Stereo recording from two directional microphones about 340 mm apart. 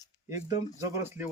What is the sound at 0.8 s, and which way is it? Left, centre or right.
Speech, centre.